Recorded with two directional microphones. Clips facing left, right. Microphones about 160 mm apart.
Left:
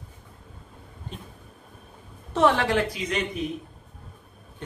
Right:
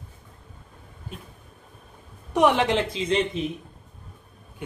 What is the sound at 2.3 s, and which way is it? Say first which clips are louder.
A woman's voice: right 1 dB; 15° right (ahead or behind).